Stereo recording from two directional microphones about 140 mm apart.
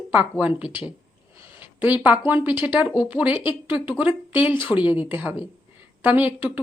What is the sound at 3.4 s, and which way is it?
Speech, 40° left (ahead or behind).